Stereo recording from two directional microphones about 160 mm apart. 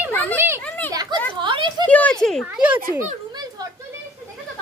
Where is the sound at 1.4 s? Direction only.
30° right (ahead or behind).